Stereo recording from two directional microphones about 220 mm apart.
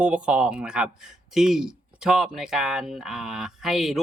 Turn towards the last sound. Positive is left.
turn(degrees=0)  # may be behind; listen again after turning